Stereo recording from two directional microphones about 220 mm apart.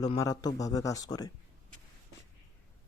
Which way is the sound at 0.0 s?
15° left (ahead or behind).